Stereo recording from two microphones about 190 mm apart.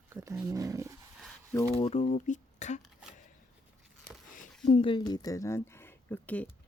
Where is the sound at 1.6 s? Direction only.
35° left (ahead or behind).